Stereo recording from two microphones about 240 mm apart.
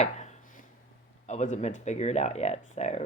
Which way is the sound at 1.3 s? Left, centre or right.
Left.